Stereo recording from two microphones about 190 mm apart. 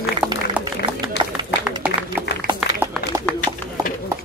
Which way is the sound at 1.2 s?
65° left (ahead or behind).